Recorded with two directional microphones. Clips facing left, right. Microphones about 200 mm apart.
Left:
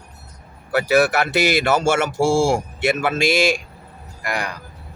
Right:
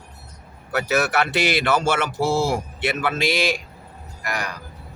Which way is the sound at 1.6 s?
45° left (ahead or behind).